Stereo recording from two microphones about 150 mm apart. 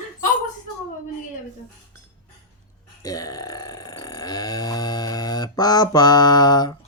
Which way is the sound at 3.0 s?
25° left (ahead or behind).